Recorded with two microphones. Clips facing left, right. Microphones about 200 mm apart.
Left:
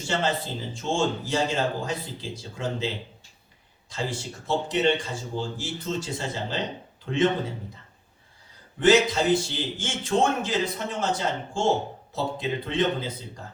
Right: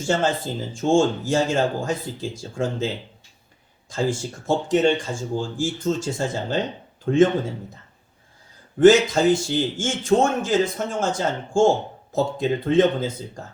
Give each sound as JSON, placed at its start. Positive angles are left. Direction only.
{"t": 0.0, "sound": "speech", "side_deg": -45}
{"t": 8.8, "sound": "speech", "side_deg": -45}